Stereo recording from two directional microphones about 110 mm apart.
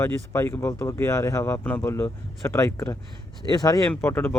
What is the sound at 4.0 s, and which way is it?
Speech, 20° left (ahead or behind).